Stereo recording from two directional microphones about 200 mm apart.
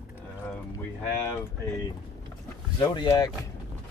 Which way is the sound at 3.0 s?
20° left (ahead or behind).